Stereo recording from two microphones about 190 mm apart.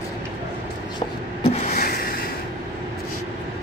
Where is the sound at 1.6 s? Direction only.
45° left (ahead or behind).